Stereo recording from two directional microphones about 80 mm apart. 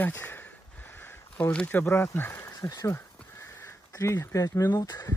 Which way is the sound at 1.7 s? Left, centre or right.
Left.